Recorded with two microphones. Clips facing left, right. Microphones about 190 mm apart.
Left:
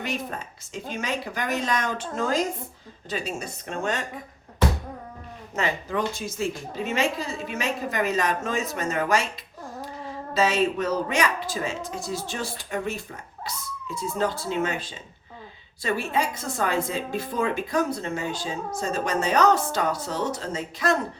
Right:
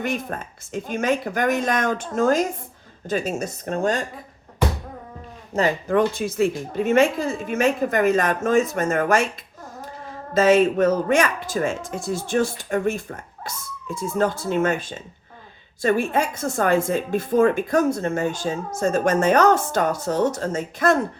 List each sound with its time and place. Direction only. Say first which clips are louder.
0.0 s speech: right 4 dB; 50° right (ahead or behind)
5.5 s speech: right 6 dB; 30° right (ahead or behind)
5.9 s speech: right 8 dB; 55° right (ahead or behind)
10.3 s speech: right 7 dB; 50° right (ahead or behind)